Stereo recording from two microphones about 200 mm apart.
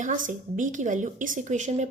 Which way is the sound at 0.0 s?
40° right (ahead or behind).